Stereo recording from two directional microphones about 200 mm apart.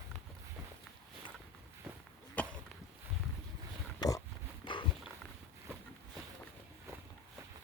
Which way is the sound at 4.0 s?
20° left (ahead or behind).